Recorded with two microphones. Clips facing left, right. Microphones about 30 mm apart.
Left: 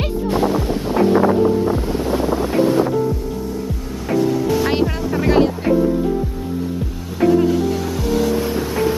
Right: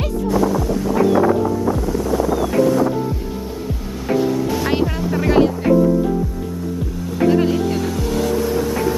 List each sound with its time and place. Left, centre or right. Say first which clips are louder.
0.3 s wind noise: right 1 dB; left
2.5 s boat: even; left
4.1 s music: left 1 dB; centre
8.4 s vehicle: right 2 dB; centre